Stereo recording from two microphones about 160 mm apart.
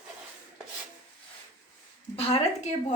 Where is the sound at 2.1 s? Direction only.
40° left (ahead or behind).